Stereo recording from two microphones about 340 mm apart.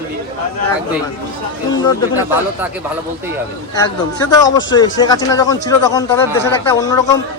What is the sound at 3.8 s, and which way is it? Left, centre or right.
Speech, centre.